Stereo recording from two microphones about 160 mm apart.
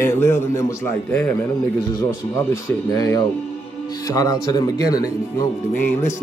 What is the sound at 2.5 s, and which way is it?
Speech, 20° left (ahead or behind).